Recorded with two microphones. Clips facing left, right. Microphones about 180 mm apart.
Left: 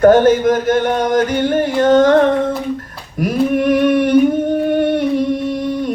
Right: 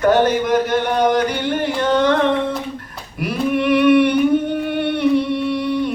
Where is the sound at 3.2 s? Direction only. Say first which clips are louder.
Left 4 dB; 45° left (ahead or behind).